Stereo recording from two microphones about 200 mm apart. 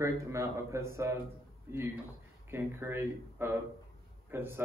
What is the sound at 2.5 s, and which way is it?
A man's voice, 10° right (ahead or behind).